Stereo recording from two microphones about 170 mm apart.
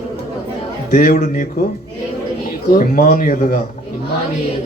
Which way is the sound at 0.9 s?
50° left (ahead or behind).